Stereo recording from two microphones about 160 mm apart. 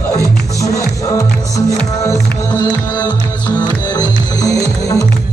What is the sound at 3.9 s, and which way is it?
Music, 25° left (ahead or behind).